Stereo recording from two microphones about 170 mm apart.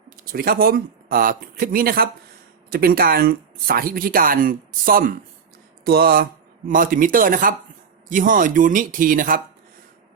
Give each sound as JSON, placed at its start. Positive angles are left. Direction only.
{"t": 0.3, "sound": "speech", "side_deg": -60}